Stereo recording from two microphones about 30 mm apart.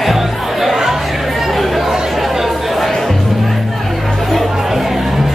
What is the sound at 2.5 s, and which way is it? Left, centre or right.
Chatter, centre.